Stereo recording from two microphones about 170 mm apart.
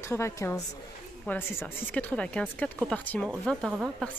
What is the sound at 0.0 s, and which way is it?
A woman's voice, 15° left (ahead or behind).